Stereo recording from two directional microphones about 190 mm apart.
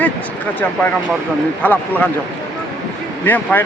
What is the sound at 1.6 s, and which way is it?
Speech, 10° left (ahead or behind).